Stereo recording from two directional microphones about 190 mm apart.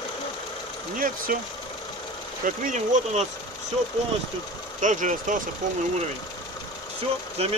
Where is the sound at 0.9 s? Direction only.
45° right (ahead or behind).